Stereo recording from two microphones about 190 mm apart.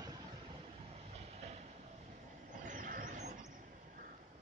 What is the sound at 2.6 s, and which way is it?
Vehicle, 45° right (ahead or behind).